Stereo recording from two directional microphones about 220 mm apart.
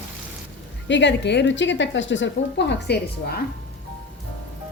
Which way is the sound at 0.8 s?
55° left (ahead or behind).